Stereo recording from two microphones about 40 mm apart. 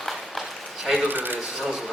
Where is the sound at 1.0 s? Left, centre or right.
Right.